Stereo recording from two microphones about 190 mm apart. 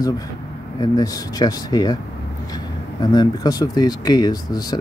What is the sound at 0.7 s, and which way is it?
Speech, 20° left (ahead or behind).